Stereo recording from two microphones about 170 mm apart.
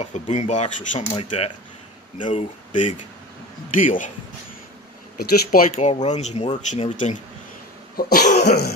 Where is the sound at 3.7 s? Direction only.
50° left (ahead or behind).